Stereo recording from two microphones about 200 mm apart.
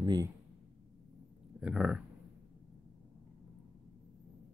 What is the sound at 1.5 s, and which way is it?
Speech, 5° right (ahead or behind).